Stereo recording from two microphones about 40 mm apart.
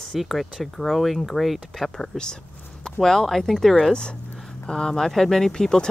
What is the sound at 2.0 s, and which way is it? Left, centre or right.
Speech, centre.